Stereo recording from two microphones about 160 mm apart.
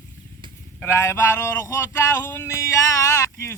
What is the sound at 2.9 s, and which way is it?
Speech, 20° left (ahead or behind).